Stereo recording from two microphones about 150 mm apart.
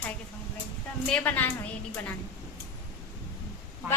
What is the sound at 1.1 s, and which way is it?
Speech, 10° left (ahead or behind).